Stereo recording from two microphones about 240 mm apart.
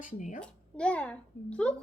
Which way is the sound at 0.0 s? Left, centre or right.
Left.